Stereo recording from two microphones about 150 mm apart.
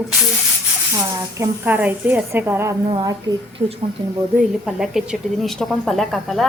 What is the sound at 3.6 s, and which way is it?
Speech, 40° right (ahead or behind).